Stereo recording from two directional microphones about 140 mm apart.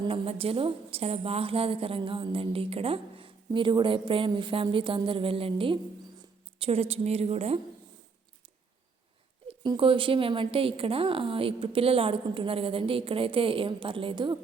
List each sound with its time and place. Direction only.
0.0 s a woman's voice: 40° right (ahead or behind)
9.5 s a woman's voice: 40° right (ahead or behind)